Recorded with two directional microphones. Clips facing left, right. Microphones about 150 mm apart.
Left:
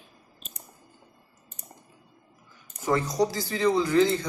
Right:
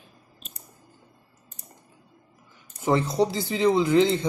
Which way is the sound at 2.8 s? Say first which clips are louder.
Right 2 dB; 25° right (ahead or behind).